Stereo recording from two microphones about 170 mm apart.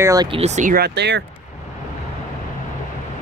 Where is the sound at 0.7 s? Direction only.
80° right.